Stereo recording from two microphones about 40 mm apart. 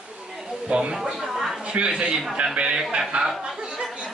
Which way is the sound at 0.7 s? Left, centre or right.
Right.